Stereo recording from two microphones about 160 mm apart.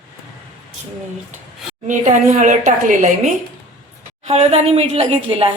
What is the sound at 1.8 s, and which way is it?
A woman's voice, 50° right (ahead or behind).